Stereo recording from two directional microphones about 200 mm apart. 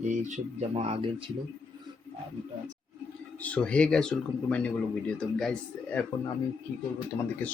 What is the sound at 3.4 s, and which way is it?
Speech, 5° left (ahead or behind).